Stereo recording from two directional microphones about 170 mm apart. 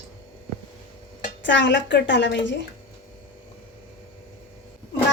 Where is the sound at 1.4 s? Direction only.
90° left.